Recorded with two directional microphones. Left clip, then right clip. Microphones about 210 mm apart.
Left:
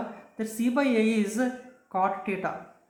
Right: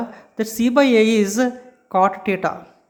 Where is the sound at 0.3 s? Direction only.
45° right (ahead or behind).